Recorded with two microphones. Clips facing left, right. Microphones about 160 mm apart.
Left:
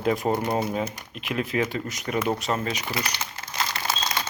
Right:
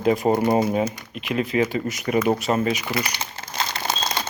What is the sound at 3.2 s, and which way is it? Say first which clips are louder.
Crumpling: right 2 dB; 25° right (ahead or behind).